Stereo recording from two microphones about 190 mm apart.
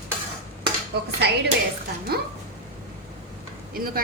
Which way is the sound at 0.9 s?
60° right (ahead or behind).